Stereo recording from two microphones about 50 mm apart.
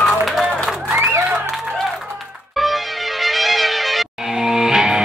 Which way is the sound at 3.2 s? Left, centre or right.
Centre.